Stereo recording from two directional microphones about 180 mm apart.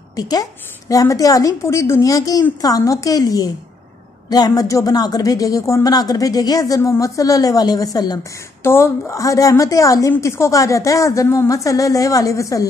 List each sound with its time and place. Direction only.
0.1 s speech: 20° left (ahead or behind)